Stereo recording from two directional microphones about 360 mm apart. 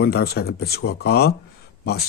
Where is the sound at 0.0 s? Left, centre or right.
Left.